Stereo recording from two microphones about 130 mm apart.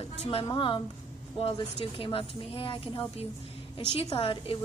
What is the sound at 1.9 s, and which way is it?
A woman's voice, 45° left (ahead or behind).